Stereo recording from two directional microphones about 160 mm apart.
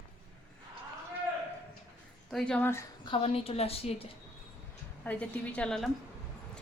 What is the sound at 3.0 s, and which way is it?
A woman's voice, 35° left (ahead or behind).